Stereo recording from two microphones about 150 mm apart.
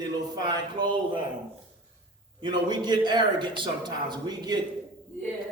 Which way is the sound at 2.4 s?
30° right (ahead or behind).